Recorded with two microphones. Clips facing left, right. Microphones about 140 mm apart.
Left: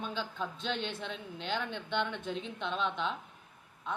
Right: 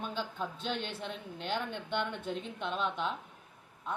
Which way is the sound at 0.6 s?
50° right (ahead or behind).